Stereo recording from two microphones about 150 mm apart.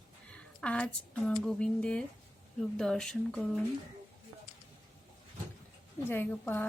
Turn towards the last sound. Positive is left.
turn(degrees=10)  # may be behind; listen again after turning